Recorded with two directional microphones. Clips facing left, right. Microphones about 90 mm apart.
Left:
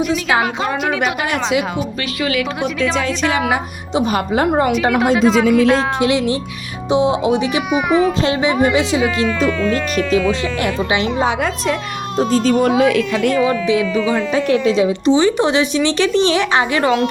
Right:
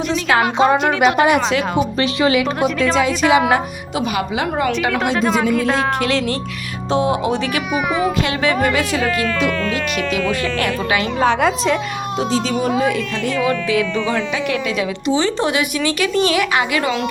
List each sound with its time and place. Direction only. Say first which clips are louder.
0.1 s speech: even; 10° left (ahead or behind)
2.6 s a woman's voice: right 2 dB; centre (ahead or behind)
4.1 s speech: left 5 dB; 40° left (ahead or behind)
5.5 s a woman's voice: left 5 dB; centre (ahead or behind)
6.0 s a woman's voice: left 3 dB; 20° left (ahead or behind)
10.6 s a woman's voice: left 1 dB; 20° left (ahead or behind)
11.4 s a woman's voice: right 3 dB; centre (ahead or behind)
12.3 s speech: left 5 dB; 55° left (ahead or behind); by 13.3 s 75° left (ahead or behind)
13.3 s speech: even; 15° left (ahead or behind)
14.3 s a woman's voice: left 6 dB; 35° left (ahead or behind)